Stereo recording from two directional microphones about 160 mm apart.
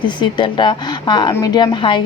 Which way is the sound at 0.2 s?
30° left (ahead or behind).